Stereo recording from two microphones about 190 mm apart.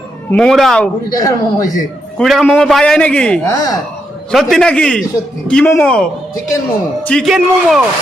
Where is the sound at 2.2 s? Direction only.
Centre (ahead or behind).